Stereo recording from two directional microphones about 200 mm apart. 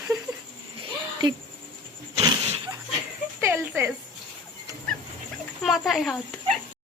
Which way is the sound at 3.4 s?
15° right (ahead or behind).